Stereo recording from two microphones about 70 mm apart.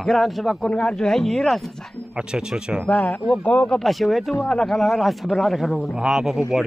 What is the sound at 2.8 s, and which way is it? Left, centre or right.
Speech, centre.